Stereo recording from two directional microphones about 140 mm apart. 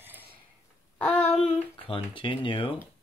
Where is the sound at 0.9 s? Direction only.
10° left (ahead or behind).